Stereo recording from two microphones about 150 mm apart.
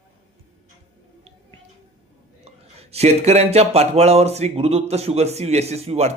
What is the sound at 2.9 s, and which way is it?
Speech, 45° right (ahead or behind).